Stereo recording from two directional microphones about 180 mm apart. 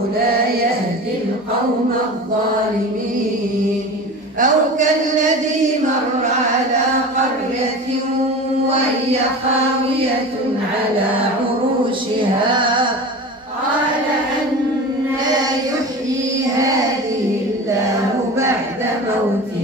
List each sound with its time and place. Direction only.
4.4 s speech: 45° right (ahead or behind)
12.5 s music: 25° right (ahead or behind)